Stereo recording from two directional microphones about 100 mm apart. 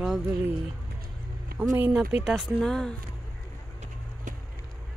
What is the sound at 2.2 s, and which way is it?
Speech, 5° right (ahead or behind).